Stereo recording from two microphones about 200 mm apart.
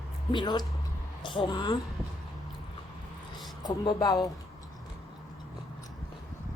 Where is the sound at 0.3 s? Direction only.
20° left (ahead or behind).